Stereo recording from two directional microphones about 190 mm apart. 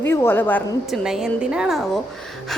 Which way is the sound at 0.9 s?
Centre (ahead or behind).